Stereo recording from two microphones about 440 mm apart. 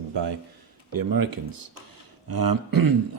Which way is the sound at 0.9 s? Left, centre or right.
Right.